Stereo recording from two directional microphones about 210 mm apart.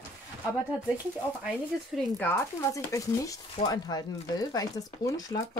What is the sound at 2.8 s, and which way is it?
Speech, 15° left (ahead or behind).